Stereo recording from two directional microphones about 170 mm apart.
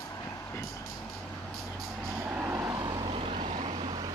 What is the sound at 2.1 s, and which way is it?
Vehicle, 10° right (ahead or behind).